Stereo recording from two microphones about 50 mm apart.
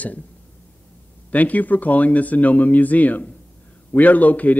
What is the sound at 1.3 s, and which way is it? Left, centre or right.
A man's voice, left.